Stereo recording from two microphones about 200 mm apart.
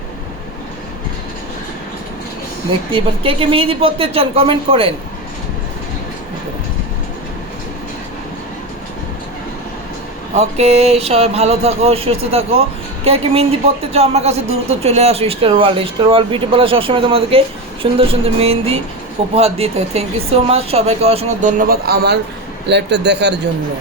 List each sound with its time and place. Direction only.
2.9 s speech: 25° right (ahead or behind)
10.3 s a man's voice: 30° right (ahead or behind); by 23.3 s 60° right (ahead or behind)